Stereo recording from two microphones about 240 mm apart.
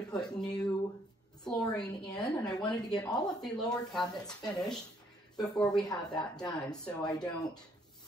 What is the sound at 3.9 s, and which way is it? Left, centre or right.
Speech, centre.